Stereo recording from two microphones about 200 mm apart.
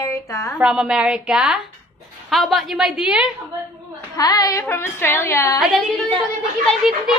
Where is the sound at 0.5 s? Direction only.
5° right (ahead or behind).